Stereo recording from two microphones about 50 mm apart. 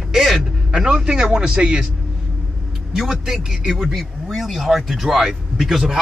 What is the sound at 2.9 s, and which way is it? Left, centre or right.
A man's voice, centre.